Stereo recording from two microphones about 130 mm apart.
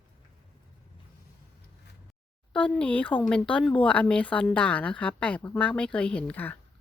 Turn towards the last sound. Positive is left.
turn(degrees=15)  # may be behind; listen again after turning